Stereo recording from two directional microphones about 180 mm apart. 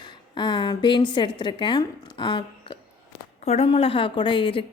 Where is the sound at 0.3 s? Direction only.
25° left (ahead or behind).